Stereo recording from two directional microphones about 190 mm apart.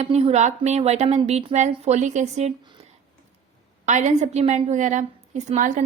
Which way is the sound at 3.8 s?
40° right (ahead or behind).